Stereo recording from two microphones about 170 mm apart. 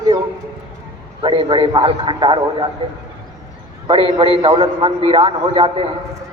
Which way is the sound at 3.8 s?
30° right (ahead or behind).